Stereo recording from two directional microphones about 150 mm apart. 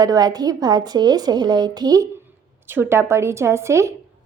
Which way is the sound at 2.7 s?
15° right (ahead or behind).